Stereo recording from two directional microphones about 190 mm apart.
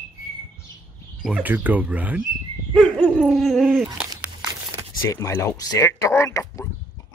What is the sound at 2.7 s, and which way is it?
Dog, centre (ahead or behind).